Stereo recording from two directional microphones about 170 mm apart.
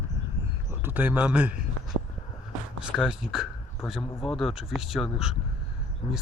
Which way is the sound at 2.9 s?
Centre (ahead or behind).